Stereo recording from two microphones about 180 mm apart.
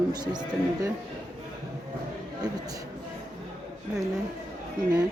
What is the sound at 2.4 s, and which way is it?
Speech, 20° right (ahead or behind).